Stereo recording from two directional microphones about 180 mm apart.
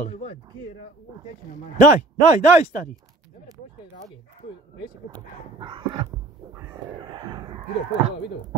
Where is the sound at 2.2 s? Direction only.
40° left (ahead or behind).